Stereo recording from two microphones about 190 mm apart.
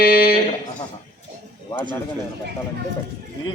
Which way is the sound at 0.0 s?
55° left (ahead or behind).